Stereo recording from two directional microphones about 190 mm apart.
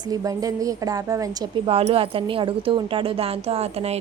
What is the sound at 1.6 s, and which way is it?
Speech, 30° right (ahead or behind).